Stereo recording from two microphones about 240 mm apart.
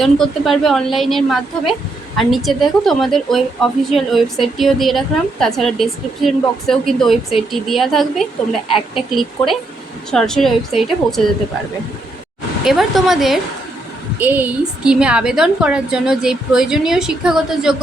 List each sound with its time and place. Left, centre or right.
0.0 s a woman's voice: centre
12.6 s a woman's voice: centre